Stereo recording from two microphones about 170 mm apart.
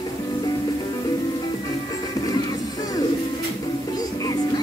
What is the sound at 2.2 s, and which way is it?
Music, 20° left (ahead or behind).